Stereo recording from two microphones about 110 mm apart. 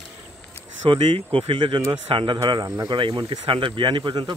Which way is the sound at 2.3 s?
35° right (ahead or behind).